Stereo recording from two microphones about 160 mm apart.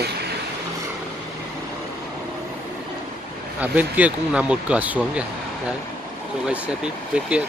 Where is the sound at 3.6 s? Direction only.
10° right (ahead or behind).